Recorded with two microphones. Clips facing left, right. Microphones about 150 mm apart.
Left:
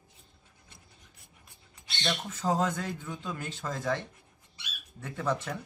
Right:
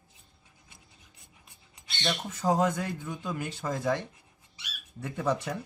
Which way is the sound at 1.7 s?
10° right (ahead or behind).